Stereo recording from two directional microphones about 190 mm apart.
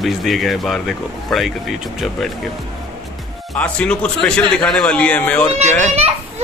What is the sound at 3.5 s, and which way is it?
Speech, 5° left (ahead or behind).